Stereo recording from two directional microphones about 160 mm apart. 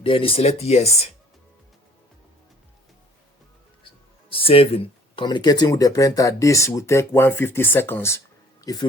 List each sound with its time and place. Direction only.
0.0 s speech: 35° left (ahead or behind)
4.3 s speech: 35° left (ahead or behind)